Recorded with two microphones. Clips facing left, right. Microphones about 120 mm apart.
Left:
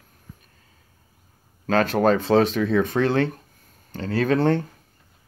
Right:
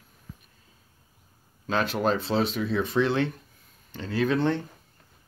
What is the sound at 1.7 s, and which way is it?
Speech, 50° left (ahead or behind).